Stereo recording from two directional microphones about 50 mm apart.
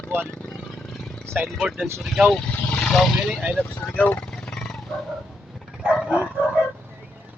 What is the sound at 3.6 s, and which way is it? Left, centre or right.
Speech, left.